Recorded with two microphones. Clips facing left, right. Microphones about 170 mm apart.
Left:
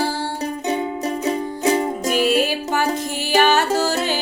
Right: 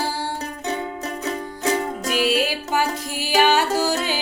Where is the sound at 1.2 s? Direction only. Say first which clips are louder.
Left 4 dB; 25° left (ahead or behind).